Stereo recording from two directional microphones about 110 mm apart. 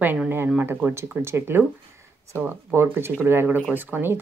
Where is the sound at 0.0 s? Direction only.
15° right (ahead or behind).